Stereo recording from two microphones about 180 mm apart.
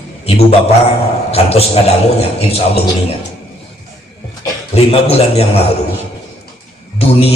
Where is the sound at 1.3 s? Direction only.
35° left (ahead or behind).